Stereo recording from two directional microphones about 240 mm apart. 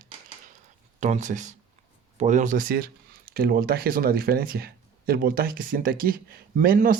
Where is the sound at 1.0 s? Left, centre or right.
Right.